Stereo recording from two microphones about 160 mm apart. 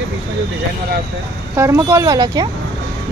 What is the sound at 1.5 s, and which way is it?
Speech, 15° right (ahead or behind).